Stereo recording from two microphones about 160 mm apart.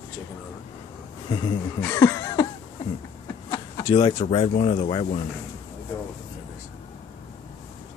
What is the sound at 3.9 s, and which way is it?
Speech, 35° left (ahead or behind).